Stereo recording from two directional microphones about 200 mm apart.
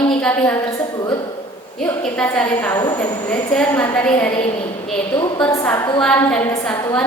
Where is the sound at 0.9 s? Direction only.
20° left (ahead or behind).